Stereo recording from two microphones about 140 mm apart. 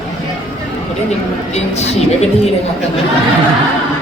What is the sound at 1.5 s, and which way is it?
Speech, 50° left (ahead or behind).